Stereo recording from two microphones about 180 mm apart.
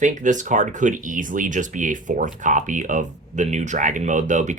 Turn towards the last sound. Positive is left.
turn(degrees=-45)  # may be behind; listen again after turning